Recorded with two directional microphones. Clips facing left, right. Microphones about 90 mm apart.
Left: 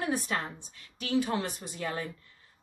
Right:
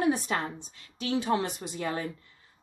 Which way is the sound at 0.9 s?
25° right (ahead or behind).